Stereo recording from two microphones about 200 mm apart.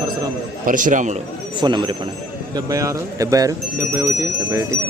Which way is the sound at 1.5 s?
20° right (ahead or behind).